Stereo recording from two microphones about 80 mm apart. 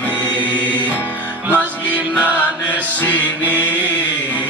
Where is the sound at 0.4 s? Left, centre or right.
Right.